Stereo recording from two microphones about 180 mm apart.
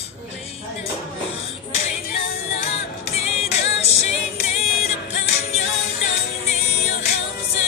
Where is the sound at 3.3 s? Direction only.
35° left (ahead or behind).